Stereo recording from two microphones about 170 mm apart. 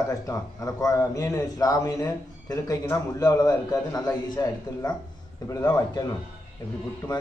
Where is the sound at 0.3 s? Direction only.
20° left (ahead or behind).